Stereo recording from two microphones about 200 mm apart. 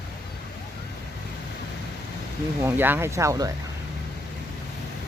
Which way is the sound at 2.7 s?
10° right (ahead or behind).